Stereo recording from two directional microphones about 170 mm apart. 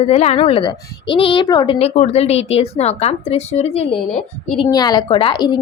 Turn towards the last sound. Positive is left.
turn(degrees=25)  # may be behind; listen again after turning